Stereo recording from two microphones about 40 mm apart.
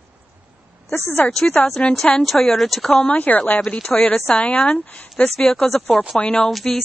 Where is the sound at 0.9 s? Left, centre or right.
Left.